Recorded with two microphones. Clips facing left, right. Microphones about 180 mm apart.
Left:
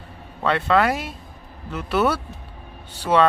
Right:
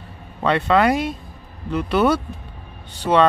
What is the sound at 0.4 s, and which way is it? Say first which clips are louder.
Speech: right 2 dB; centre (ahead or behind).